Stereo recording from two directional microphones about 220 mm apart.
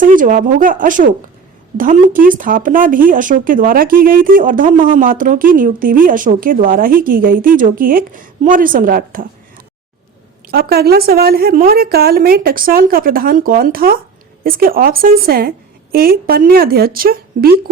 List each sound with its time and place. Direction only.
0.0 s speech: 40° right (ahead or behind)
10.5 s a woman's voice: 45° right (ahead or behind)